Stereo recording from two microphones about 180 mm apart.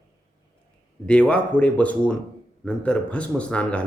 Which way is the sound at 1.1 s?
5° left (ahead or behind).